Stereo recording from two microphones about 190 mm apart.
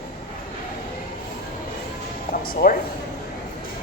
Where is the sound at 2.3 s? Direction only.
50° left (ahead or behind).